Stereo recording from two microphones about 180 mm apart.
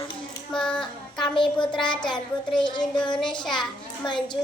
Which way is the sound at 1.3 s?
25° left (ahead or behind).